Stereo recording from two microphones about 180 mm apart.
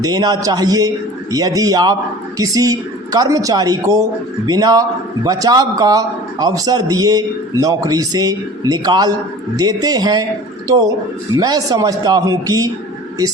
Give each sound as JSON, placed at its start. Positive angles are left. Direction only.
{"t": 0.0, "sound": "a woman's voice", "side_deg": -20}
{"t": 11.3, "sound": "a woman's voice", "side_deg": -20}